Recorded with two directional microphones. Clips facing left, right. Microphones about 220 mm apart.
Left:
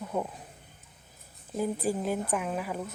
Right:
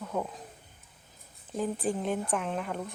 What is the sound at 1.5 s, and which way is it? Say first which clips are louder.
Speech: left 1 dB; 5° left (ahead or behind).